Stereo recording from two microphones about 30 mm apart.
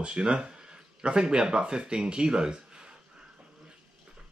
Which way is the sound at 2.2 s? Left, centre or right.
Right.